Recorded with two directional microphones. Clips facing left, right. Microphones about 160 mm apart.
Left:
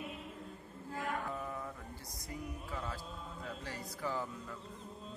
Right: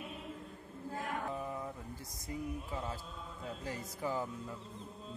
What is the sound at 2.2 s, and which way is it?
A man's voice, 25° right (ahead or behind).